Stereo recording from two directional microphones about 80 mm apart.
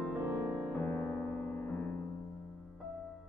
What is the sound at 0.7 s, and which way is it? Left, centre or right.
Music, left.